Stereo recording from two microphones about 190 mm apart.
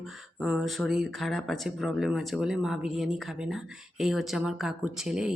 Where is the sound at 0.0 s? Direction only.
Centre (ahead or behind).